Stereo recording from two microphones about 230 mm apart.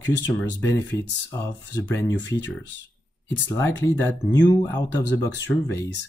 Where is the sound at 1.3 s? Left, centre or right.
Centre.